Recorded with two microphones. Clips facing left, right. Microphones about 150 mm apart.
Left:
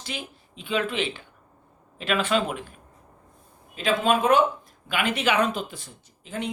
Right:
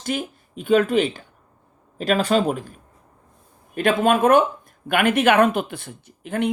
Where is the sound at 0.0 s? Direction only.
50° right (ahead or behind).